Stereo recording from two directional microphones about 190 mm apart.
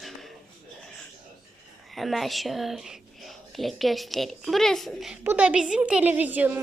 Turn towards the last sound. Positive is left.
turn(degrees=-10)  # may be behind; listen again after turning